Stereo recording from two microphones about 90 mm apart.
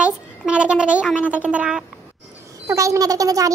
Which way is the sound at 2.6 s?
35° right (ahead or behind).